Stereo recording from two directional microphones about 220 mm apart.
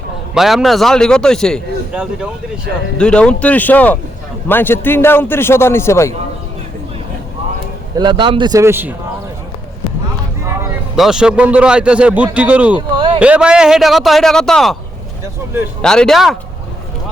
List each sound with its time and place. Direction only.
0.3 s a man's voice: centre (ahead or behind)
7.9 s a man's voice: 20° right (ahead or behind)
10.9 s a man's voice: centre (ahead or behind)
15.8 s a man's voice: 5° left (ahead or behind)